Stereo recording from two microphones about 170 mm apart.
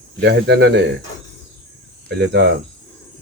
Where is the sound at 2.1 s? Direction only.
85° right.